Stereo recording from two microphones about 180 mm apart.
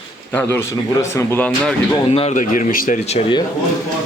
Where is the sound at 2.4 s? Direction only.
45° left (ahead or behind); by 3.4 s 30° left (ahead or behind).